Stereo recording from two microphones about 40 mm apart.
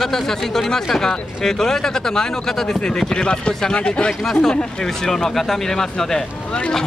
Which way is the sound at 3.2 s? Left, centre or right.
Left.